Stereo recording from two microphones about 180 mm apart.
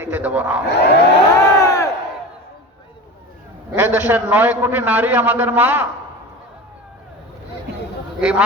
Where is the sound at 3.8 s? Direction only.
10° right (ahead or behind).